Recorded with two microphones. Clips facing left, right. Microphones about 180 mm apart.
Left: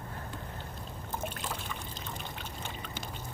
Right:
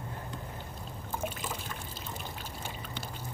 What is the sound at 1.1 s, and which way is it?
Boat, 5° right (ahead or behind).